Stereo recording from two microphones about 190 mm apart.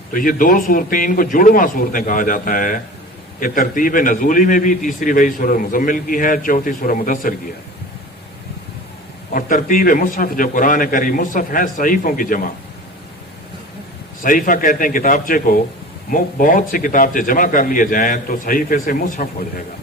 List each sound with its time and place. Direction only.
0.1 s a man's voice: 45° left (ahead or behind)
9.3 s a man's voice: 45° left (ahead or behind)
14.3 s a man's voice: 45° left (ahead or behind)